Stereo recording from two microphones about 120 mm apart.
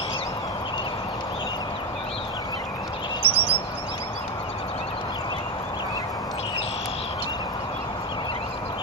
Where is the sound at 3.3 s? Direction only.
50° right (ahead or behind).